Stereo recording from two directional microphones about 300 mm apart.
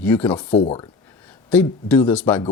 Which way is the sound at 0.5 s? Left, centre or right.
Centre.